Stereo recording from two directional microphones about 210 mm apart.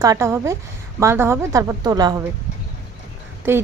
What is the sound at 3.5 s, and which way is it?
Speech, 10° right (ahead or behind).